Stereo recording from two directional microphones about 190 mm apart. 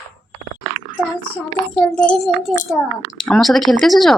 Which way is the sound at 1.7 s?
5° left (ahead or behind).